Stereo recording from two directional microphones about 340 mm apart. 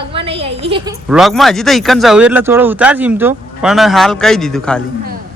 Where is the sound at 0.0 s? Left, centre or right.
Centre.